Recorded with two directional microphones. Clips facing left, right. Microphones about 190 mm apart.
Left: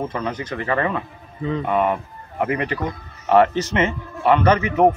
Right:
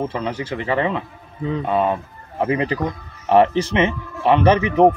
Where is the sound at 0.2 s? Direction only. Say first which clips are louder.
Right 1 dB; 30° right (ahead or behind).